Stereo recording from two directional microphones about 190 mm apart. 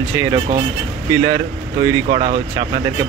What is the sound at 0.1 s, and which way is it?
Speech, 15° right (ahead or behind).